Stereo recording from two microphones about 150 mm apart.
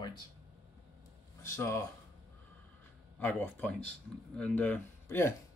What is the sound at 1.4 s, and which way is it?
Speech, 20° left (ahead or behind).